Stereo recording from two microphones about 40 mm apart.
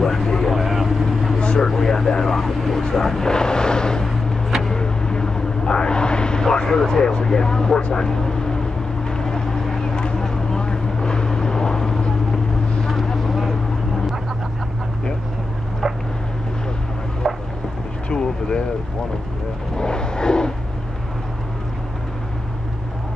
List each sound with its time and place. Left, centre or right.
0.0 s speech: centre
0.6 s vehicle: centre
1.4 s vehicle: left
1.7 s speech: centre
4.6 s vehicle: centre
6.9 s speech: centre
9.1 s vehicle: centre
17.2 s a sound: centre
18.1 s vehicle: left
19.8 s vehicle: left